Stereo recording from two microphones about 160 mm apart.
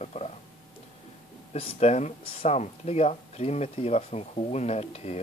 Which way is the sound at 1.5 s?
45° left (ahead or behind).